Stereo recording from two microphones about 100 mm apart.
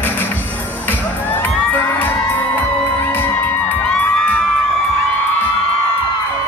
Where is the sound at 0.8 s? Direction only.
20° left (ahead or behind).